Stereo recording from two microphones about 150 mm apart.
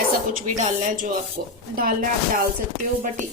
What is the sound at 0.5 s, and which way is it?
Speech, 50° right (ahead or behind).